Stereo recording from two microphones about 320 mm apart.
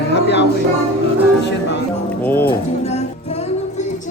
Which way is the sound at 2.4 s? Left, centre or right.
Centre.